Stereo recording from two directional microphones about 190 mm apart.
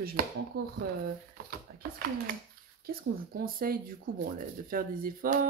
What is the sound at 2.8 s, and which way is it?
Speech, 50° right (ahead or behind).